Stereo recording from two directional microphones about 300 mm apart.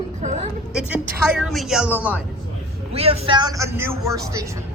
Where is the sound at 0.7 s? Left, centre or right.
Centre.